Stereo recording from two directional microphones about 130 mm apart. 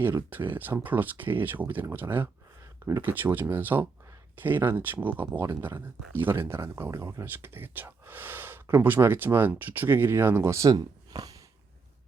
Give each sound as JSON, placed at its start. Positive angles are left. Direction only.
{"t": 0.3, "sound": "speech", "side_deg": -15}